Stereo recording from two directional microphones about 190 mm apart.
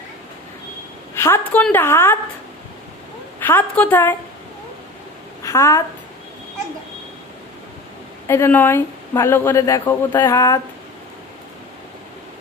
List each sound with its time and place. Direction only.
1.1 s speech: 15° left (ahead or behind)
3.3 s speech: 10° left (ahead or behind)
5.4 s a woman's voice: 15° left (ahead or behind)
8.3 s speech: 10° left (ahead or behind)